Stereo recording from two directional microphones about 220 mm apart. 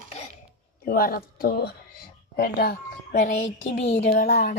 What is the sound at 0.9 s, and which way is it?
A woman's voice, 40° left (ahead or behind).